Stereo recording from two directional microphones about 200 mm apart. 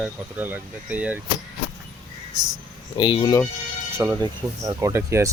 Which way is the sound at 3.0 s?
25° left (ahead or behind).